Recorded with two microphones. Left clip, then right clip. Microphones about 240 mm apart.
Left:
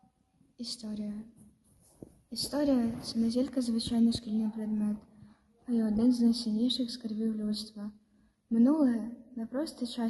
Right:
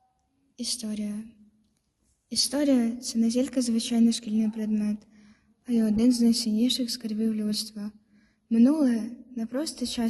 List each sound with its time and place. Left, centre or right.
0.5 s a woman's voice: right
2.3 s a woman's voice: right